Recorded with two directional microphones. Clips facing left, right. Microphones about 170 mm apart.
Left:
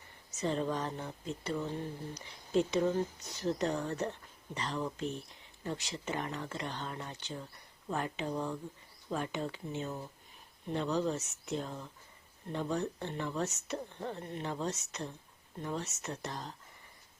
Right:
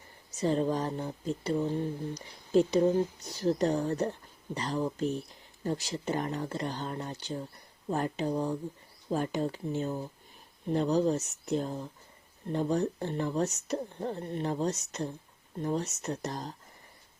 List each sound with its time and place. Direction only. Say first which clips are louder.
0.3 s speech: right 5 dB; 40° right (ahead or behind)